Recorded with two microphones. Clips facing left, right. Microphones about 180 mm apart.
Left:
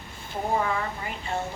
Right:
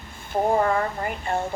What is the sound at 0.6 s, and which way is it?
Speech, 50° right (ahead or behind).